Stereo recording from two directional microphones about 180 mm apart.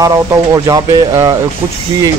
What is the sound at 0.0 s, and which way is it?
Speech, 20° right (ahead or behind).